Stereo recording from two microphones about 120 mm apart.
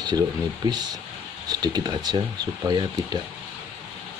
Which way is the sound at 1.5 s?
35° right (ahead or behind).